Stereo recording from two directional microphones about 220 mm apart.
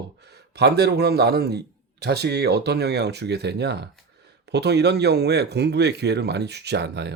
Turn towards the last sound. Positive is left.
turn(degrees=-50)  # may be behind; listen again after turning